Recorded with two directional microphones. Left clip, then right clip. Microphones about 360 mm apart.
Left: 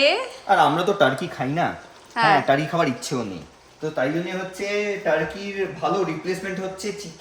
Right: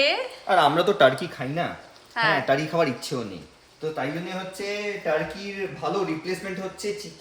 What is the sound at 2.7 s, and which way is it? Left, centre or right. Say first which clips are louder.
Speech: left 1 dB; left.